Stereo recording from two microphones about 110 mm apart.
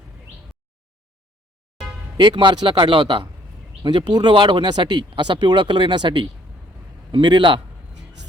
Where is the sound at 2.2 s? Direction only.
45° right (ahead or behind).